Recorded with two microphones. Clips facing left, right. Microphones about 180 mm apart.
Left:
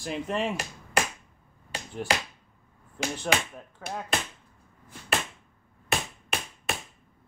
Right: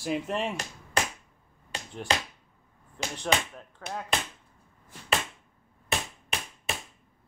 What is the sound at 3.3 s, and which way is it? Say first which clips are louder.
Speech: right 2 dB; 10° left (ahead or behind).